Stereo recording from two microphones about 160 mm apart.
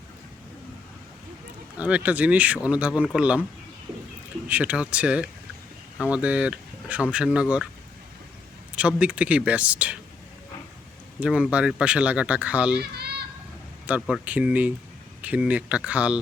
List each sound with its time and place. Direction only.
1.8 s speech: 10° right (ahead or behind)
4.4 s speech: 10° right (ahead or behind)
8.7 s speech: 5° right (ahead or behind)
11.2 s speech: 5° right (ahead or behind)
12.8 s children playing: 90° right
13.8 s speech: 10° right (ahead or behind)